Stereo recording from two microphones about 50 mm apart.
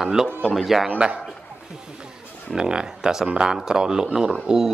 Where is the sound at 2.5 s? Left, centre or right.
Centre.